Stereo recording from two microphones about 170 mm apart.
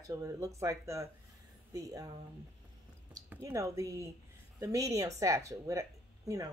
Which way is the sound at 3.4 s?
20° right (ahead or behind).